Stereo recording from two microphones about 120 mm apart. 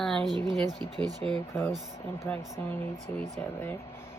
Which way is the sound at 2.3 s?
15° left (ahead or behind).